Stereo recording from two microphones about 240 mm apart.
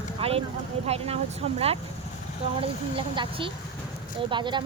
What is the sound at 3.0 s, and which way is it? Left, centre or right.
Speech, right.